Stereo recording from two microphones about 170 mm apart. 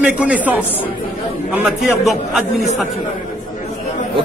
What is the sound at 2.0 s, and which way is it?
Speech, centre (ahead or behind).